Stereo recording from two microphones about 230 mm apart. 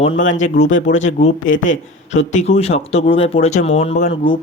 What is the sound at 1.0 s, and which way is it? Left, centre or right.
Speech, left.